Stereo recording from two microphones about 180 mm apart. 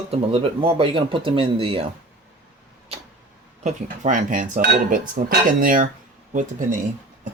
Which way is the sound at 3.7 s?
45° right (ahead or behind).